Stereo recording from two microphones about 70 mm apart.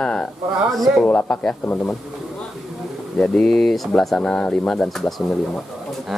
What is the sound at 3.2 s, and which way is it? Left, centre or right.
A man's voice, centre.